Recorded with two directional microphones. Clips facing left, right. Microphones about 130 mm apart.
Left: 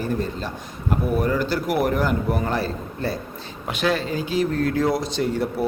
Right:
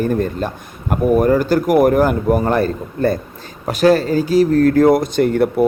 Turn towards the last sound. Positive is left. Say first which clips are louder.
# right 9 dB
turn(degrees=-60)  # may be behind; listen again after turning